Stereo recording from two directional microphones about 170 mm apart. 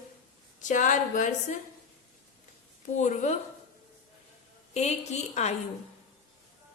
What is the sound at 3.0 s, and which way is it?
Speech, 45° left (ahead or behind).